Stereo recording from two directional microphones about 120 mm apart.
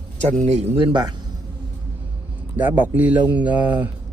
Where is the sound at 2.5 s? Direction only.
15° right (ahead or behind).